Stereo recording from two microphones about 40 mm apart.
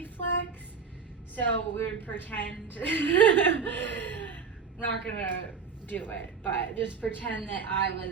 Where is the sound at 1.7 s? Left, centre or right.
Left.